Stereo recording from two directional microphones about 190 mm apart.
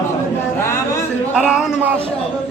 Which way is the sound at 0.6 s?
15° left (ahead or behind).